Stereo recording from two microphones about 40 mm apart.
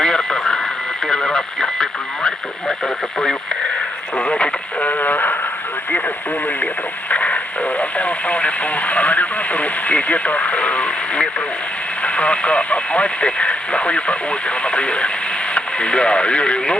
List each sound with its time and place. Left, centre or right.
0.0 s radio: centre
4.2 s speech: left
7.1 s speech: left